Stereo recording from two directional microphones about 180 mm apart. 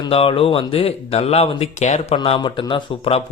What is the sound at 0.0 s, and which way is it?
Speech, 30° left (ahead or behind).